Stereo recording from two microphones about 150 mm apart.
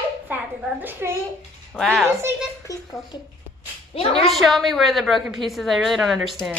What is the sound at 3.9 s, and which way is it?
Speech, 40° left (ahead or behind).